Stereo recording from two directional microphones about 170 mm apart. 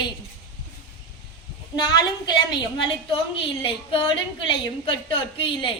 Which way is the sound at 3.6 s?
30° left (ahead or behind).